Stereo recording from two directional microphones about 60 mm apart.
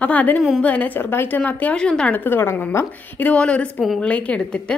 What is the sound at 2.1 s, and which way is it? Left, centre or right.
A woman's voice, left.